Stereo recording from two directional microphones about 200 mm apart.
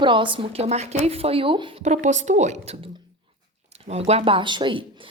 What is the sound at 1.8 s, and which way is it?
A woman's voice, 35° right (ahead or behind).